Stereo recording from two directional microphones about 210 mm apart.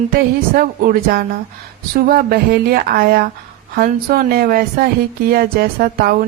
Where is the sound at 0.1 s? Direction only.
45° right (ahead or behind).